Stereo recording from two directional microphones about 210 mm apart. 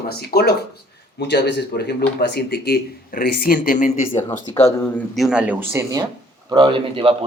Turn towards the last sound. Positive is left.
turn(degrees=-25)  # may be behind; listen again after turning